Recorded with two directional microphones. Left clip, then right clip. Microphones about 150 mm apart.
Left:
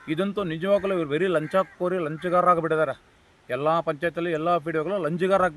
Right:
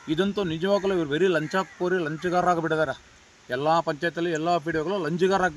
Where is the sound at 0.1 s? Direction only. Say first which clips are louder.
Right 1 dB; 15° left (ahead or behind).